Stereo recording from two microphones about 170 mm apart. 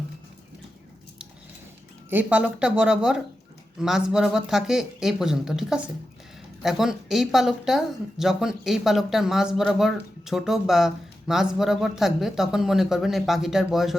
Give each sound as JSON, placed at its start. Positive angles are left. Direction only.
{"t": 2.0, "sound": "speech", "side_deg": -10}